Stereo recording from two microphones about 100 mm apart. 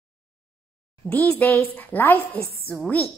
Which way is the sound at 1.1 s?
20° left (ahead or behind).